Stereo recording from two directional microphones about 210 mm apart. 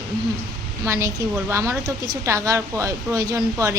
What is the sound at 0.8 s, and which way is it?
A woman's voice, 15° right (ahead or behind).